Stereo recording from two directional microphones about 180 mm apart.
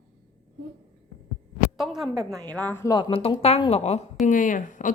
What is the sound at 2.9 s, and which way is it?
Speech, 30° left (ahead or behind).